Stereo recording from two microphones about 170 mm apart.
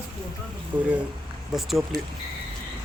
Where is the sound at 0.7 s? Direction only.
25° right (ahead or behind).